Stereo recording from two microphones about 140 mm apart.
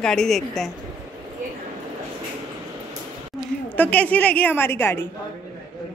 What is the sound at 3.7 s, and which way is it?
A woman's voice, 10° left (ahead or behind).